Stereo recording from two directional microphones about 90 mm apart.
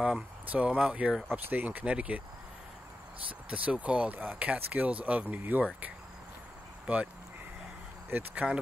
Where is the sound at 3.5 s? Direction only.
15° right (ahead or behind).